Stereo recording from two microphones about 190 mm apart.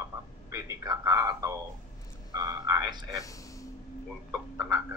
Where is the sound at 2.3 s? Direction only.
20° right (ahead or behind).